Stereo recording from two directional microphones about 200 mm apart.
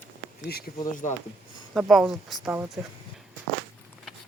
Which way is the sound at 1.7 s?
Centre (ahead or behind).